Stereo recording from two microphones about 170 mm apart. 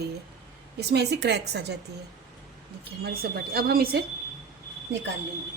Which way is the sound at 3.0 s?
65° right (ahead or behind).